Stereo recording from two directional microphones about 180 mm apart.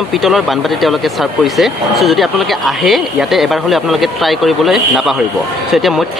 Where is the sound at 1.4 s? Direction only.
Centre (ahead or behind).